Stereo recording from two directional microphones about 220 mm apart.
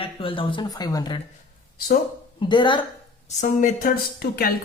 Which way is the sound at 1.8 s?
40° left (ahead or behind).